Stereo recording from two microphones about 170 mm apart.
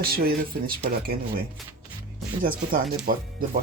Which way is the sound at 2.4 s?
55° right (ahead or behind).